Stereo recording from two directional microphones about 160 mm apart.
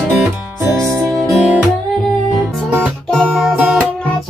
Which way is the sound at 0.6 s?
20° right (ahead or behind).